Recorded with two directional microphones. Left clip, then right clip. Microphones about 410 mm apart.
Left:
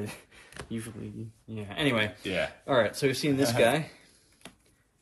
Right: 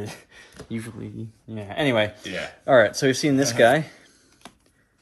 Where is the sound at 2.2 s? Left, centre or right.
Centre.